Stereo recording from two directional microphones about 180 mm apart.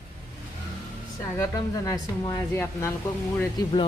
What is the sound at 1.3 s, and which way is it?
Speech, 20° left (ahead or behind).